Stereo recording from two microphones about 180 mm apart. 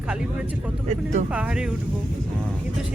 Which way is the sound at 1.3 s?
5° right (ahead or behind).